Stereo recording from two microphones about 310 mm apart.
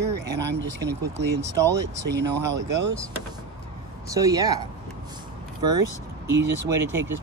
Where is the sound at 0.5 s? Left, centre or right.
Right.